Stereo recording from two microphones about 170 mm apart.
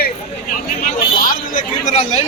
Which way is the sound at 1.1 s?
55° left (ahead or behind).